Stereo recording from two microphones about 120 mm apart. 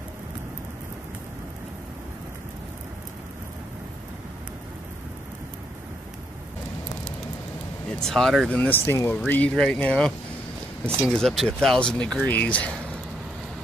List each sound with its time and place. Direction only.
8.0 s speech: 5° left (ahead or behind)
8.5 s speech: 15° left (ahead or behind)